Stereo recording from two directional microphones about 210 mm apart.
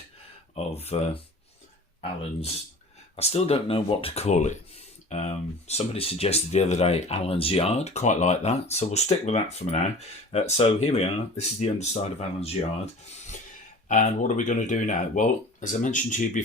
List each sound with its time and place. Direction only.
0.9 s speech: 30° left (ahead or behind)
3.2 s speech: 30° left (ahead or behind)